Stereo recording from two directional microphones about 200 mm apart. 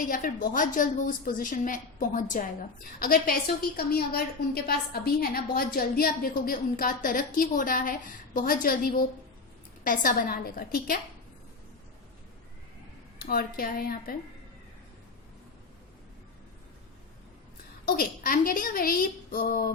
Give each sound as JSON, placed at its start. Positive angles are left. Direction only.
{"t": 0.1, "sound": "a woman's voice", "side_deg": 45}
{"t": 13.1, "sound": "a woman's voice", "side_deg": 45}
{"t": 17.8, "sound": "a woman's voice", "side_deg": 45}